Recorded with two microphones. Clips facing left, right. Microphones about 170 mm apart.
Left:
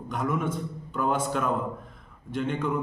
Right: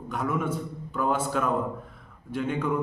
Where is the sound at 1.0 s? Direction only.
5° right (ahead or behind).